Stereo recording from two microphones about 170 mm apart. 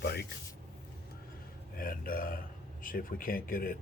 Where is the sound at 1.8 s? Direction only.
55° left (ahead or behind).